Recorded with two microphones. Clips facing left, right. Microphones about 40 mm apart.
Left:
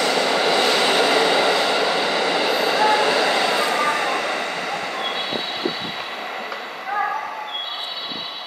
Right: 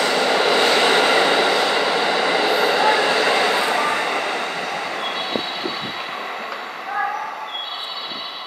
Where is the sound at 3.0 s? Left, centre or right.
Centre.